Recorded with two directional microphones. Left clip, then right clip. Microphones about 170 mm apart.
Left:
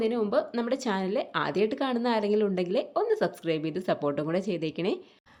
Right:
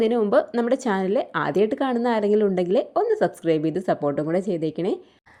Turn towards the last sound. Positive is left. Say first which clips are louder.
# right 5 dB
turn(degrees=-25)  # may be behind; listen again after turning